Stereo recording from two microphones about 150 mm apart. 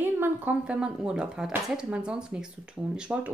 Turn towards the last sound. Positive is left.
turn(degrees=-5)  # may be behind; listen again after turning